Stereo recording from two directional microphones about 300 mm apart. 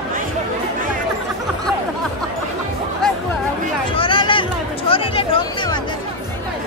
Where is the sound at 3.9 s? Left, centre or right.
Centre.